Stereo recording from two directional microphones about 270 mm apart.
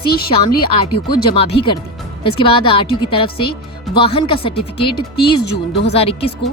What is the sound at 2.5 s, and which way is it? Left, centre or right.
Speech, centre.